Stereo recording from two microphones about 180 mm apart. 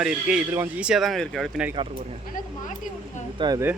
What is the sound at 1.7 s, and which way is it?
Speech, 25° right (ahead or behind).